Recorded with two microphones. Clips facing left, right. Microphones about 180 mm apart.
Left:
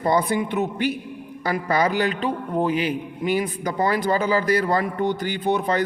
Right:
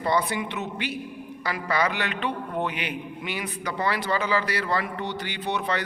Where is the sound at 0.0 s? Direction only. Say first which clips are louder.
Left 4 dB; 45° left (ahead or behind).